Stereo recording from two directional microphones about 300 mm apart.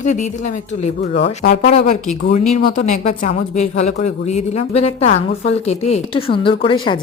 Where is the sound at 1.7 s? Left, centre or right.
Left.